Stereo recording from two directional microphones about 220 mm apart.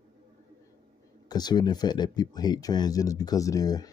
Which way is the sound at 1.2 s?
20° left (ahead or behind).